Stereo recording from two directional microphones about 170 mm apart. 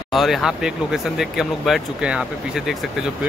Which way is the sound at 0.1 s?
Centre (ahead or behind).